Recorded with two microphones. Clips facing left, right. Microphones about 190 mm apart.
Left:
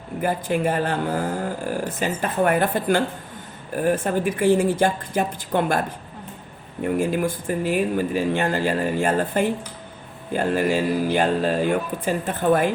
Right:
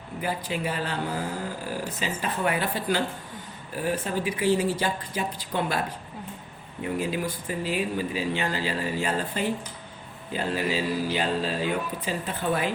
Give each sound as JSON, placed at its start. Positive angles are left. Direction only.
{"t": 0.2, "sound": "speech", "side_deg": 50}
{"t": 6.8, "sound": "speech", "side_deg": 50}